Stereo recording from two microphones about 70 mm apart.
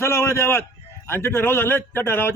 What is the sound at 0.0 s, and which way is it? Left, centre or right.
A man's voice, left.